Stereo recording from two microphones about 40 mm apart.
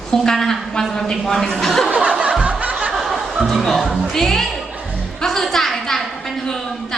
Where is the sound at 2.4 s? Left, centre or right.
Right.